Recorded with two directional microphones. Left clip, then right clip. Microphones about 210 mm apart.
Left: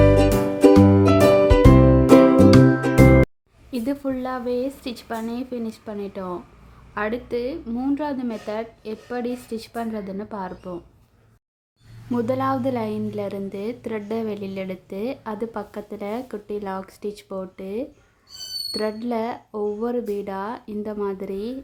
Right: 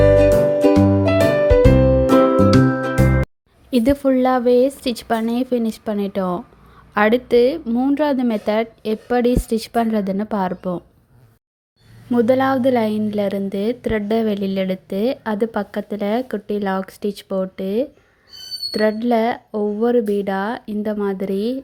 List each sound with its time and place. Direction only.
0.1 s music: 5° left (ahead or behind)
3.7 s a woman's voice: 30° right (ahead or behind)
12.1 s a woman's voice: 20° right (ahead or behind)